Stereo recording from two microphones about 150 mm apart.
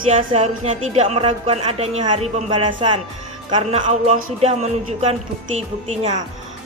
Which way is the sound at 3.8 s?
50° right (ahead or behind).